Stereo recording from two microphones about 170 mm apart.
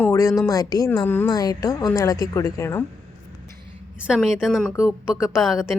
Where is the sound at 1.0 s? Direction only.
10° left (ahead or behind).